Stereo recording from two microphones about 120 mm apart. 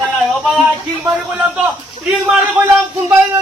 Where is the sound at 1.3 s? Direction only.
5° right (ahead or behind).